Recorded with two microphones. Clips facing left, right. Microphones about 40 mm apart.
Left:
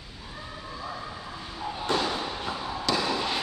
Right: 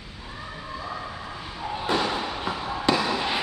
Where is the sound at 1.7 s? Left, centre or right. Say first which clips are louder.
Right 2 dB; centre.